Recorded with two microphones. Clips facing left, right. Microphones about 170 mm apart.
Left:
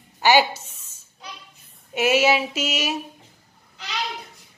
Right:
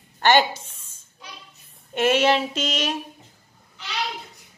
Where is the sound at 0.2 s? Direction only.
10° left (ahead or behind).